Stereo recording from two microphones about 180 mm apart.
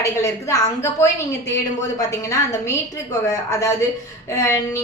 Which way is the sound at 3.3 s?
15° left (ahead or behind).